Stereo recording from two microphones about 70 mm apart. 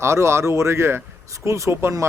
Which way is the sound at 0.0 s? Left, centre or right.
Right.